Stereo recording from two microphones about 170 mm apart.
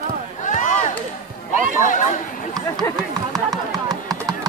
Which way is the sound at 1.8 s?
50° left (ahead or behind).